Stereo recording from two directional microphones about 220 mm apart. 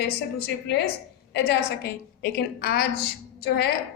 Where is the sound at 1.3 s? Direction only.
50° left (ahead or behind).